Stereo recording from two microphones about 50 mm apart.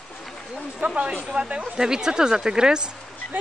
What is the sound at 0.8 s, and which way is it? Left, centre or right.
Speech, centre.